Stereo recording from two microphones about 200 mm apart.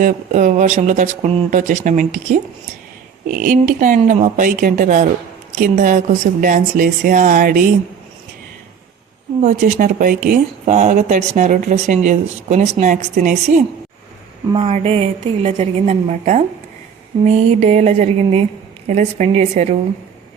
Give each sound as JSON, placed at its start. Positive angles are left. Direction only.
{"t": 0.0, "sound": "speech", "side_deg": -40}
{"t": 3.2, "sound": "speech", "side_deg": -45}
{"t": 9.4, "sound": "speech", "side_deg": -40}